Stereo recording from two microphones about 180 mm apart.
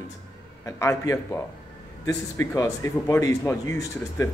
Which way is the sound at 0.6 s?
15° left (ahead or behind).